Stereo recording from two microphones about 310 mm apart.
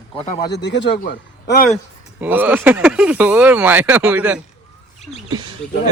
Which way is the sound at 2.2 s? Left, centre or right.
Centre.